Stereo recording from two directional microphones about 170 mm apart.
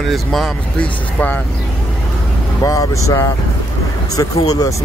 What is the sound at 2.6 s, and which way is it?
Speech, 20° left (ahead or behind).